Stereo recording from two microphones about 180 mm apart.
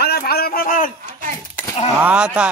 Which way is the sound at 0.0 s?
60° left (ahead or behind).